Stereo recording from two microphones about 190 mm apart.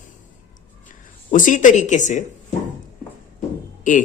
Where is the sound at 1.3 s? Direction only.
40° left (ahead or behind).